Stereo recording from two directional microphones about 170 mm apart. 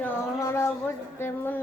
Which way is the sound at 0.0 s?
15° left (ahead or behind).